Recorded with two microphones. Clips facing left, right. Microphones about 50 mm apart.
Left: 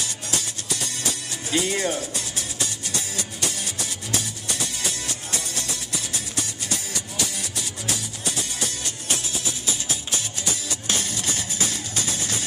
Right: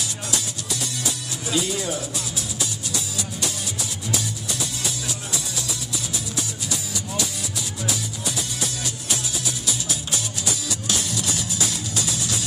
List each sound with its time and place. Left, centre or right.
1.5 s speech: left
10.7 s music: left